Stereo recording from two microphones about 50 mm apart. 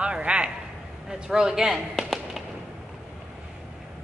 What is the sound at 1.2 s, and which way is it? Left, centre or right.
Speech, centre.